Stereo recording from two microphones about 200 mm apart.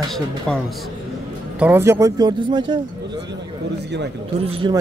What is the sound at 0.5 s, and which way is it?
Speech, 5° left (ahead or behind).